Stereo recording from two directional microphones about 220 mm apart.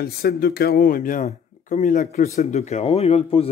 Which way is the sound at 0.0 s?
45° left (ahead or behind).